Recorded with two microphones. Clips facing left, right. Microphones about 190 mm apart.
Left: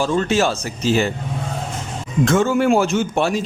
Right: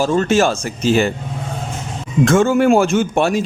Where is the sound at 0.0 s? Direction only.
45° right (ahead or behind).